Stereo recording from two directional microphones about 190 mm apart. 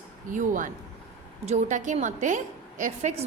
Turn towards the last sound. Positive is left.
turn(degrees=-40)  # may be behind; listen again after turning